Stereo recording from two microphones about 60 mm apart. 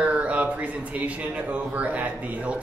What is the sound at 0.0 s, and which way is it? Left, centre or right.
Speech, right.